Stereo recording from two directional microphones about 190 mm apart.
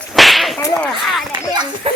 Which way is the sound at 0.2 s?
Centre (ahead or behind).